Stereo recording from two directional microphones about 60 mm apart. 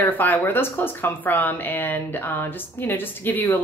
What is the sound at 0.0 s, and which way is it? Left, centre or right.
A woman's voice, left.